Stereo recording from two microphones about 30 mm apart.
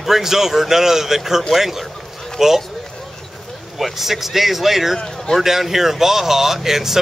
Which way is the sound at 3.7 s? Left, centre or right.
Centre.